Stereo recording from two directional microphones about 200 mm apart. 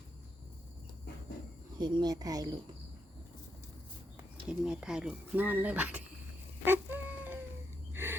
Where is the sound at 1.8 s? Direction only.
20° right (ahead or behind).